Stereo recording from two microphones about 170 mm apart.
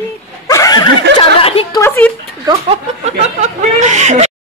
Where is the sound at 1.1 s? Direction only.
35° left (ahead or behind).